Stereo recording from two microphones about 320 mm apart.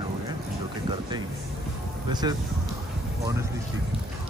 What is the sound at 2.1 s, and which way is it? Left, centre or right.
Speech, centre.